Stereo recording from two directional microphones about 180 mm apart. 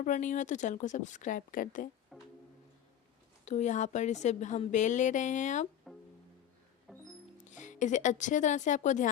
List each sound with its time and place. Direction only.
0.0 s a woman's voice: 45° left (ahead or behind)
2.1 s music: centre (ahead or behind)
3.4 s speech: 40° left (ahead or behind)
5.9 s music: centre (ahead or behind)
7.5 s speech: 45° left (ahead or behind)